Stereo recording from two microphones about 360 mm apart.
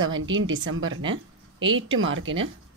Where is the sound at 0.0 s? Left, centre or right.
Right.